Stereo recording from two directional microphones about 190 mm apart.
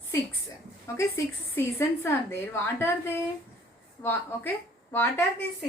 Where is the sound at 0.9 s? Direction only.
15° left (ahead or behind).